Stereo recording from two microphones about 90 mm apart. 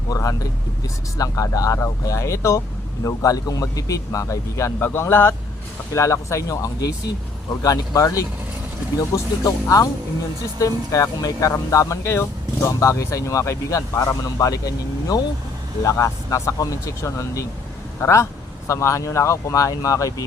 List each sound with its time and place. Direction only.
0.1 s speech: 40° left (ahead or behind)